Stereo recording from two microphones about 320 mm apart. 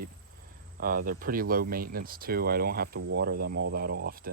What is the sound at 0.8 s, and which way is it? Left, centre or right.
Speech, right.